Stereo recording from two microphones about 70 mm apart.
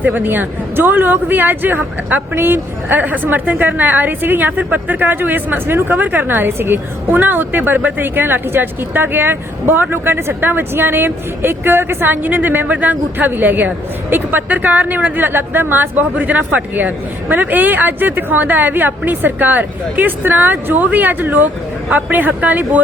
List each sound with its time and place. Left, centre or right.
0.0 s speech: right